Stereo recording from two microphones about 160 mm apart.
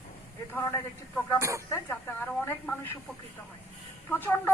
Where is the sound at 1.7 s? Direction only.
10° left (ahead or behind).